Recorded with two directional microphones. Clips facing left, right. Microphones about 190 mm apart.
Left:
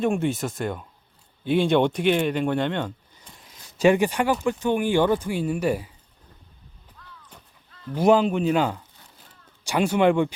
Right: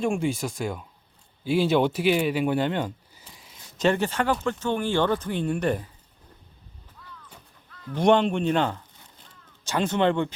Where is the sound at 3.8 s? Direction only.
15° left (ahead or behind).